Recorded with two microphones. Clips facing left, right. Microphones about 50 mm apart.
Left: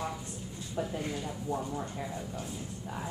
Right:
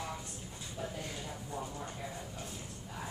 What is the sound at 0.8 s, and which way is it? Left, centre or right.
Speech, left.